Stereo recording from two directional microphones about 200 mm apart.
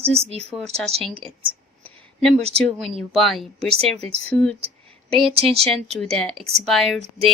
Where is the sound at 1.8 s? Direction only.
5° left (ahead or behind).